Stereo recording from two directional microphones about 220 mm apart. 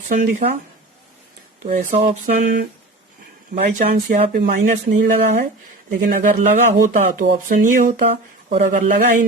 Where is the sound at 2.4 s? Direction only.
45° right (ahead or behind).